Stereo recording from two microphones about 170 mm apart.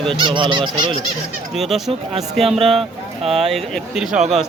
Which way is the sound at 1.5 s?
Centre (ahead or behind).